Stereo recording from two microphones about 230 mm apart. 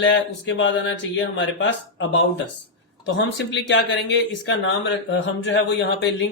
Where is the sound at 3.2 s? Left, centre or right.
Left.